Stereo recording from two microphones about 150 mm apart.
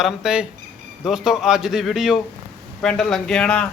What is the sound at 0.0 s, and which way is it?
Speech, 5° right (ahead or behind).